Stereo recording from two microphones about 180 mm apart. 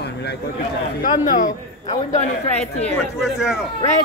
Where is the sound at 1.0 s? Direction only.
45° left (ahead or behind).